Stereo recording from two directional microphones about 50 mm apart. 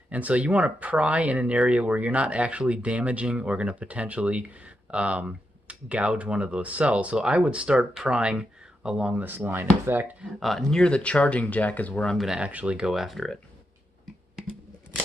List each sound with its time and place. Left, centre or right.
0.1 s speech: right
7.2 s speech: centre
9.2 s speech: right
10.4 s speech: centre
10.7 s speech: centre
12.4 s speech: right
12.8 s speech: centre